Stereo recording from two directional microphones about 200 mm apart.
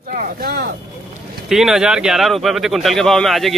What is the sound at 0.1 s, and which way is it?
Speech, 50° right (ahead or behind).